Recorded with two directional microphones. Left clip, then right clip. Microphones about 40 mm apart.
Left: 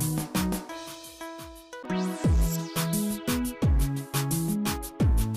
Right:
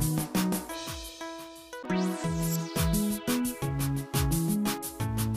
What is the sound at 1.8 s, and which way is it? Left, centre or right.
Music, centre.